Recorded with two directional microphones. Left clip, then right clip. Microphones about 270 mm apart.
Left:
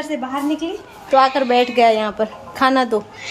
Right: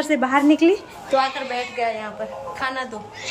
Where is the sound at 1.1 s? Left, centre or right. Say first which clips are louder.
Left 8 dB; centre.